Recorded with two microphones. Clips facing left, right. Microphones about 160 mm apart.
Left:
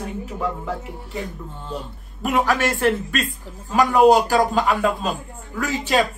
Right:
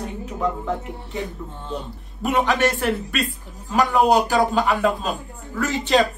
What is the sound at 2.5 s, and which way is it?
Speech, 15° right (ahead or behind).